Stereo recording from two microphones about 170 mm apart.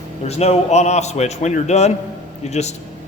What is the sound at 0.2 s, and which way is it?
A man's voice, 40° left (ahead or behind).